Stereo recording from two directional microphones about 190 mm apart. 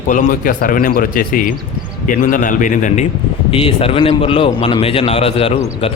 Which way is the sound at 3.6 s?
30° left (ahead or behind).